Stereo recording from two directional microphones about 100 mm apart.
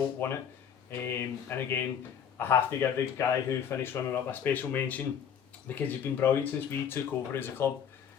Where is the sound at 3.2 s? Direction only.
35° left (ahead or behind).